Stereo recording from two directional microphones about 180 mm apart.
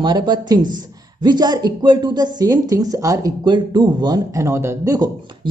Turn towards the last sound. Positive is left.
turn(degrees=-20)  # may be behind; listen again after turning